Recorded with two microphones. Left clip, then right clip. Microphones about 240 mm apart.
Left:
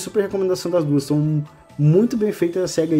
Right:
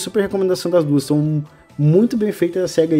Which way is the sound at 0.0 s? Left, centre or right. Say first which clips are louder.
Right 2 dB; centre.